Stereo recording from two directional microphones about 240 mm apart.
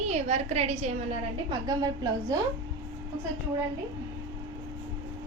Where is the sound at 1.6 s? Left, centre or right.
Centre.